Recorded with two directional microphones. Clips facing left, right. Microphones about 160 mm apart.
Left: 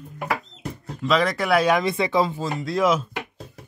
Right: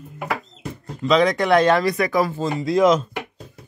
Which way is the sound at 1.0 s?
Centre (ahead or behind).